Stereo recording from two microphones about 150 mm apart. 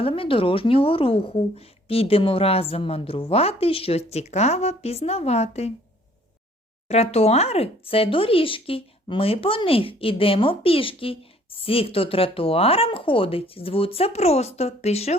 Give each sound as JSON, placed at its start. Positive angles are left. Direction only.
{"t": 0.0, "sound": "speech", "side_deg": 35}
{"t": 6.8, "sound": "speech", "side_deg": 45}